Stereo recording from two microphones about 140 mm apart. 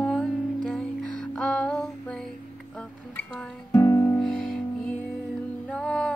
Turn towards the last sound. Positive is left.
turn(degrees=5)  # may be behind; listen again after turning